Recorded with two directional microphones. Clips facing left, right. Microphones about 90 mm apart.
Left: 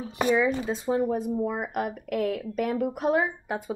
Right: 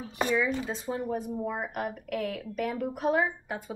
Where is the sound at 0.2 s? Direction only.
20° left (ahead or behind).